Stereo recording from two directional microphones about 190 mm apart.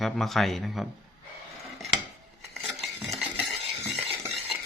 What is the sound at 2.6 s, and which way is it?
Cutlery, centre (ahead or behind).